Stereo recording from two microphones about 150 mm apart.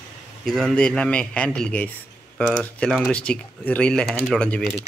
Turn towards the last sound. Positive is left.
turn(degrees=10)  # may be behind; listen again after turning